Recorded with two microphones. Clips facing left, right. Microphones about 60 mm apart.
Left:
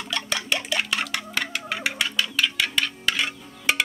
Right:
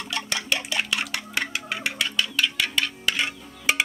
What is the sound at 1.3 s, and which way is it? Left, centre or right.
Music, centre.